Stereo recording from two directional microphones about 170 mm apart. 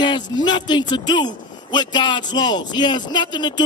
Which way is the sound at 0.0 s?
25° left (ahead or behind).